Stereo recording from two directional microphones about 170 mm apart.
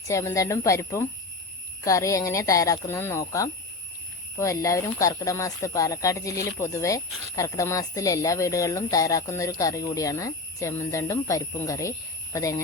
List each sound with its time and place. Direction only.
0.1 s speech: 20° left (ahead or behind)